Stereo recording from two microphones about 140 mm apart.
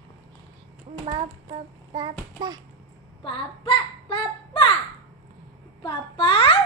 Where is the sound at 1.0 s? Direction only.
45° right (ahead or behind).